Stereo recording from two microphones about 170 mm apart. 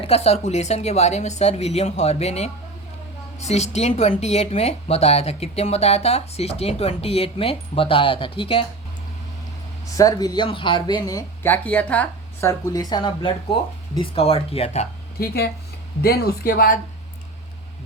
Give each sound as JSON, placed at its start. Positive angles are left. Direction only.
{"t": 0.0, "sound": "speech", "side_deg": 40}
{"t": 10.0, "sound": "speech", "side_deg": 20}
{"t": 11.5, "sound": "speech", "side_deg": 10}
{"t": 12.5, "sound": "speech", "side_deg": 20}
{"t": 16.0, "sound": "speech", "side_deg": 60}